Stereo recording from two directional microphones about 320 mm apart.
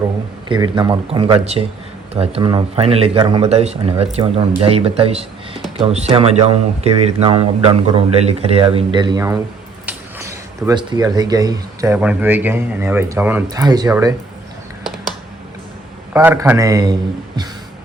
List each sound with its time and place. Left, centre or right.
0.4 s speech: centre
16.1 s speech: centre